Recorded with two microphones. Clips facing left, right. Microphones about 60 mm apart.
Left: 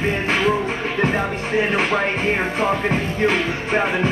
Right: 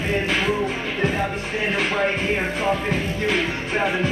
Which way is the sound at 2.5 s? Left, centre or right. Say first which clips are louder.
Left 3 dB; left.